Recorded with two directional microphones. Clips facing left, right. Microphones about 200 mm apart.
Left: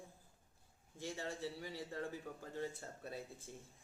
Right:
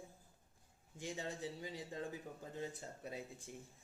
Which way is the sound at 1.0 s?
20° right (ahead or behind).